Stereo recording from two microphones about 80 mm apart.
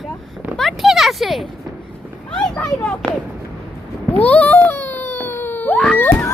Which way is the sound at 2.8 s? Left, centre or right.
Centre.